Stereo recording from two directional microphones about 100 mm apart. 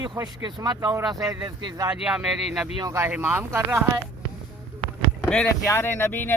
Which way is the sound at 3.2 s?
25° right (ahead or behind).